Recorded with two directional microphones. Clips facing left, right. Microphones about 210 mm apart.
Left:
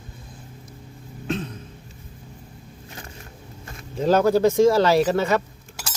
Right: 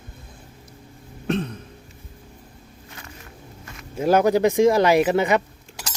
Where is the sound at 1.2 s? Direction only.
65° right (ahead or behind).